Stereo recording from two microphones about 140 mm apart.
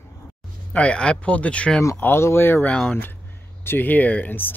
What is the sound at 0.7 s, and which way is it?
Speech, 10° left (ahead or behind).